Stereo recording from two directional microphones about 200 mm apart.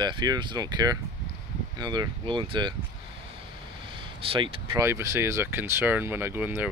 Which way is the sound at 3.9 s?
25° right (ahead or behind).